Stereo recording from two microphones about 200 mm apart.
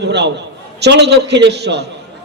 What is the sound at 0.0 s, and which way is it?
A man's voice, 60° right (ahead or behind).